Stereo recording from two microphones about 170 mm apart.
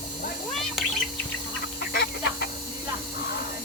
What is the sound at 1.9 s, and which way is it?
Chicken, 70° left (ahead or behind).